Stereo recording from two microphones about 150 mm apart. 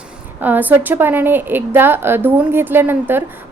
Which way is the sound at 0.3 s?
10° right (ahead or behind).